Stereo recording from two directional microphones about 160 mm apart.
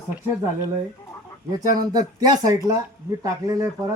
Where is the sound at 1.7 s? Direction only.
25° right (ahead or behind).